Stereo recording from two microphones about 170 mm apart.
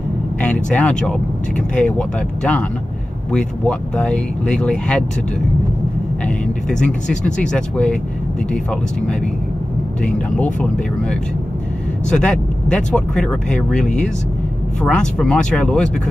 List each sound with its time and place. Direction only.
0.4 s speech: 5° left (ahead or behind)
6.2 s speech: 5° left (ahead or behind)
10.0 s speech: 5° left (ahead or behind)